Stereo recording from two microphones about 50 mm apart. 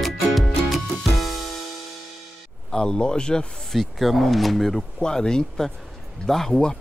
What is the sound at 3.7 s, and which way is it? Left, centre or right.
Speech, centre.